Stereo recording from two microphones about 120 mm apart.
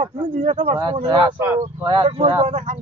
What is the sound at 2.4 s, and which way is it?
Speech, 80° right.